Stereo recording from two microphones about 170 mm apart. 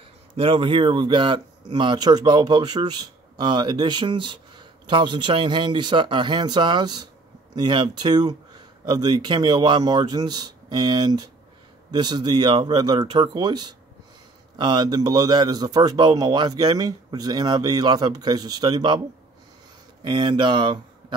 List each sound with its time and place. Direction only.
0.4 s speech: 30° right (ahead or behind)
20.0 s speech: 30° right (ahead or behind)